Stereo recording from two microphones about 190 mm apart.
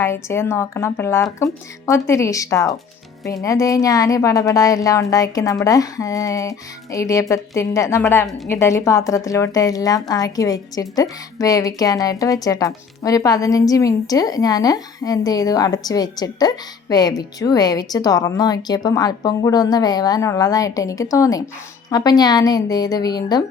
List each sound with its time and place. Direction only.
0.0 s a woman's voice: 15° left (ahead or behind)